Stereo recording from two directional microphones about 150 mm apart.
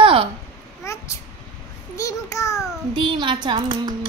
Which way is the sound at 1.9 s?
20° left (ahead or behind).